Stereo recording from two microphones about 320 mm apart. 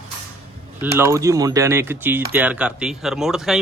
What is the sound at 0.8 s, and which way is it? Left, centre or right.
A man's voice, centre.